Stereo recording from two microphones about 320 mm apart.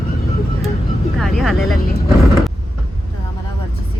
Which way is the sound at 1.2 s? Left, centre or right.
Centre.